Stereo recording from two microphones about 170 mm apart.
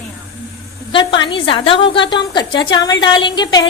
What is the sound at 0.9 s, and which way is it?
A woman's voice, 30° left (ahead or behind).